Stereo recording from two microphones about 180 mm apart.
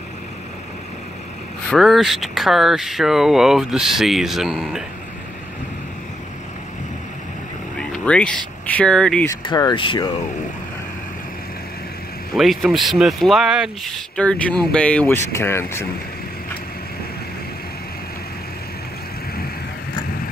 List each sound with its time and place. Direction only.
1.7 s speech: centre (ahead or behind)
7.7 s vehicle: 5° left (ahead or behind)
8.6 s speech: 5° left (ahead or behind)
9.4 s speech: 25° left (ahead or behind)
12.4 s speech: centre (ahead or behind)